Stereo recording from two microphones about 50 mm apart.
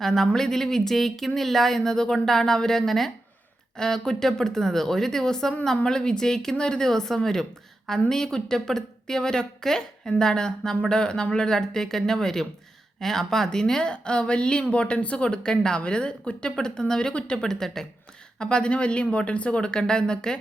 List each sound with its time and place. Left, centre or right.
0.0 s speech: centre